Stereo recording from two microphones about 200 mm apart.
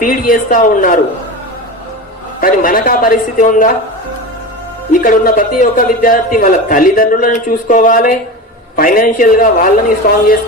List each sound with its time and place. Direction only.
0.0 s a man's voice: 40° left (ahead or behind)
2.4 s a man's voice: 45° left (ahead or behind)
4.9 s a man's voice: 40° left (ahead or behind)